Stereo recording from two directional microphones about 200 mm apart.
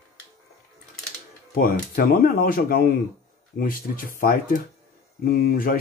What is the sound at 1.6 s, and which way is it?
Speech, 45° left (ahead or behind).